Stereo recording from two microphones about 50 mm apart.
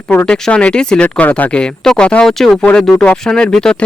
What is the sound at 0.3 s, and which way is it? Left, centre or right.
Speech, centre.